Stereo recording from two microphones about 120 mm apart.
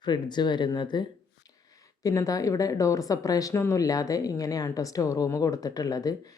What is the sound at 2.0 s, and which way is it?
A woman's voice, 30° left (ahead or behind).